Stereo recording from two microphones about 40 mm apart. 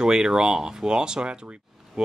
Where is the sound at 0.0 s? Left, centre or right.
Centre.